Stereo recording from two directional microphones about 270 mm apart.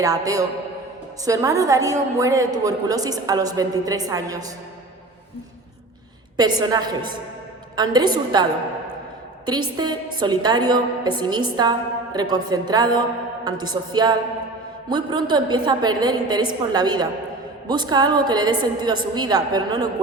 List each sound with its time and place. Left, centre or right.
0.0 s a woman's voice: centre
6.3 s a woman's voice: centre
9.5 s a woman's voice: centre